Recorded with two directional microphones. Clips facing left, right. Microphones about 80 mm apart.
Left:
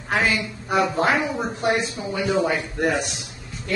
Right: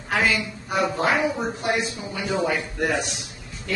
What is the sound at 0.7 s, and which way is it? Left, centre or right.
Speech, left.